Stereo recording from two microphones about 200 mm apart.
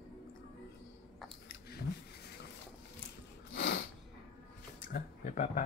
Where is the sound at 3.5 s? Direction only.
65° left (ahead or behind).